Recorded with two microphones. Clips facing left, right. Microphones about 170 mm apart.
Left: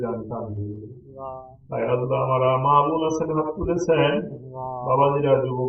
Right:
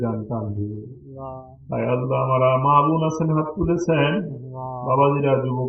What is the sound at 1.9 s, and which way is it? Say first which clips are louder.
Mantra: even; 25° left (ahead or behind).